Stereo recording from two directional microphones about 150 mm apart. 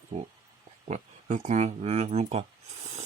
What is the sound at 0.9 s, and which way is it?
Speech, 55° right (ahead or behind).